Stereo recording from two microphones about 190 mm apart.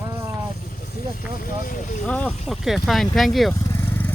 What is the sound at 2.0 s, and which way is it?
Speech, 5° left (ahead or behind).